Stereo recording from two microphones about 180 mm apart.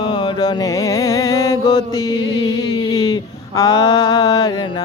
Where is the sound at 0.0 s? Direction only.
25° left (ahead or behind).